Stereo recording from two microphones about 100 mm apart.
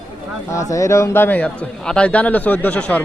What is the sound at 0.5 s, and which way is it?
A man's voice, 35° left (ahead or behind).